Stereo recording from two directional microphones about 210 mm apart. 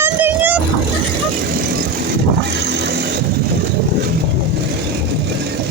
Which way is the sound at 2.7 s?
55° right (ahead or behind).